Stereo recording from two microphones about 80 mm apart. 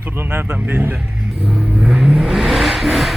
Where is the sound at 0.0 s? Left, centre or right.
Right.